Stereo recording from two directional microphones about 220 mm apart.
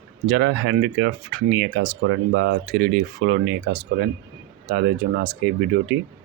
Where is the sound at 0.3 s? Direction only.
50° right (ahead or behind).